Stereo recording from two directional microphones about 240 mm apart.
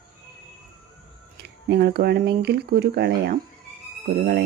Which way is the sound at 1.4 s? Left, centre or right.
Right.